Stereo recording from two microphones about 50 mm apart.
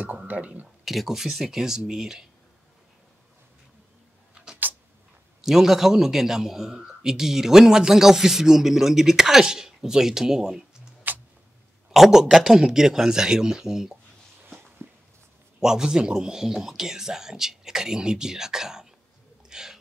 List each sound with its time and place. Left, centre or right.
0.3 s speech: right
0.8 s a man's voice: centre
5.4 s a man's voice: centre
11.1 s a sound: right
11.9 s a man's voice: centre
15.6 s a man's voice: centre
19.5 s a sound: centre